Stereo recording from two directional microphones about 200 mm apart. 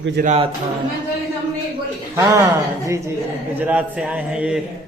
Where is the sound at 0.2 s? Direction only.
30° right (ahead or behind).